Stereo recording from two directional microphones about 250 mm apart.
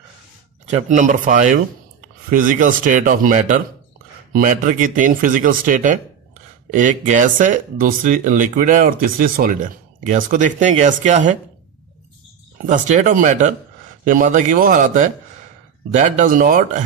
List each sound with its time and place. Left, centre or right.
0.7 s speech: right
12.6 s speech: right